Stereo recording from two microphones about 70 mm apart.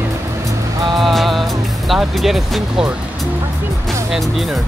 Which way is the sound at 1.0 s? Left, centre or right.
Centre.